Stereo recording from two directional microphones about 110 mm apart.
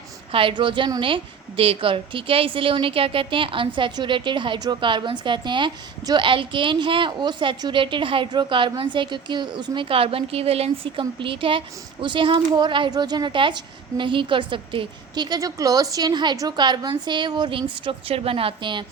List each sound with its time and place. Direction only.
0.3 s a woman's voice: 55° right (ahead or behind)
9.9 s a woman's voice: 60° right (ahead or behind)